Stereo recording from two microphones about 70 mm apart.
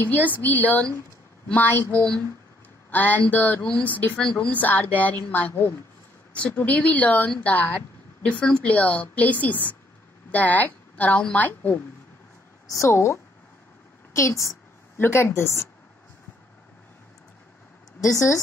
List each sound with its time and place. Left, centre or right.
0.0 s speech: left
6.3 s speech: centre
12.6 s a woman's voice: left
15.0 s speech: left
18.0 s a woman's voice: left